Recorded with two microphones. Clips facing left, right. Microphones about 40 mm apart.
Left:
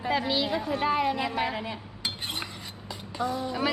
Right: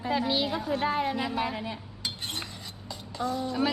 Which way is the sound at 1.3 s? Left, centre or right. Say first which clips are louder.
Left 1 dB; left.